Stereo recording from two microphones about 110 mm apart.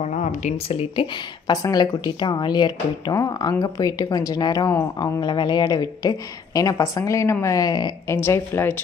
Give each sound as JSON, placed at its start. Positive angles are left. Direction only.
{"t": 0.0, "sound": "speech", "side_deg": 90}
{"t": 1.1, "sound": "speech", "side_deg": 40}
{"t": 8.1, "sound": "speech", "side_deg": 25}